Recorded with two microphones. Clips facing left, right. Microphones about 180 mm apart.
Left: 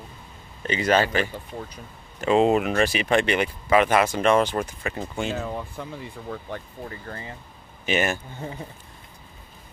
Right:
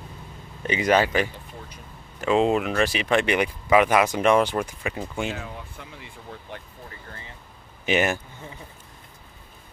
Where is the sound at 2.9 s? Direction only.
45° left (ahead or behind).